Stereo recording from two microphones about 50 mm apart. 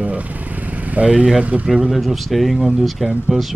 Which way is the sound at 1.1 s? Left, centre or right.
Centre.